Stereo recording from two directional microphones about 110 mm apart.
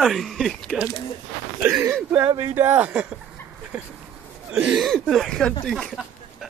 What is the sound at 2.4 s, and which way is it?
Speech, 20° right (ahead or behind).